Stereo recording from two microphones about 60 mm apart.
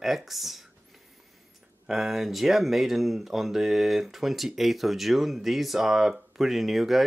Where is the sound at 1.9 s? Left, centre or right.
Centre.